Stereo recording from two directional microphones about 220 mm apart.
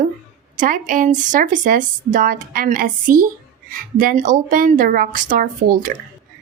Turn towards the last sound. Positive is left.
turn(degrees=-40)  # may be behind; listen again after turning